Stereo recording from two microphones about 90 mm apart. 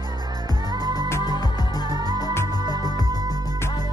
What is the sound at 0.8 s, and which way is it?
Music, 50° right (ahead or behind).